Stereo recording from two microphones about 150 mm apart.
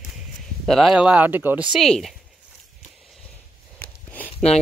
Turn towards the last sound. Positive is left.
turn(degrees=10)  # may be behind; listen again after turning